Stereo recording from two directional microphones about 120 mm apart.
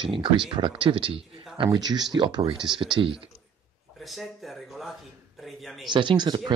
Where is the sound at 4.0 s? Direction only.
Centre (ahead or behind).